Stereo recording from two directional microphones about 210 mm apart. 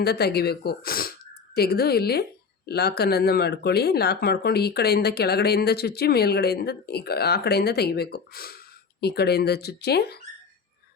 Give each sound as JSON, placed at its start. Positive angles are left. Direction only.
{"t": 0.0, "sound": "speech", "side_deg": 50}